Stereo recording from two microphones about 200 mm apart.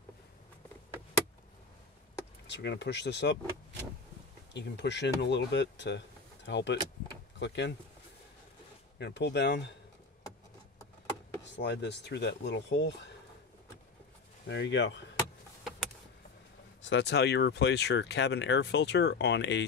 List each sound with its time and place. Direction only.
2.4 s speech: 60° left (ahead or behind)
4.6 s speech: 60° left (ahead or behind)
8.9 s speech: 60° left (ahead or behind)
11.5 s speech: 60° left (ahead or behind)
14.5 s speech: 60° left (ahead or behind)
16.8 s speech: 65° left (ahead or behind)